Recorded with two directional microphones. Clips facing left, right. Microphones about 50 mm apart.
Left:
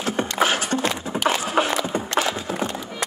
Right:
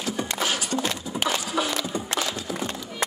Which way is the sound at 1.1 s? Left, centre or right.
Left.